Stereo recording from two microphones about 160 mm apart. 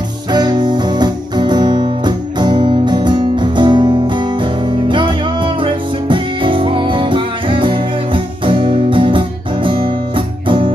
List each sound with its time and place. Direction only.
0.3 s music: 25° right (ahead or behind)